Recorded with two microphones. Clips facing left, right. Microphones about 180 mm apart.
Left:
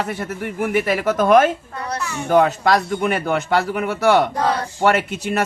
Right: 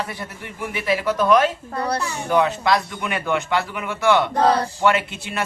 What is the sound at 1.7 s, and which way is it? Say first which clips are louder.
Speech: right 2 dB; 35° right (ahead or behind).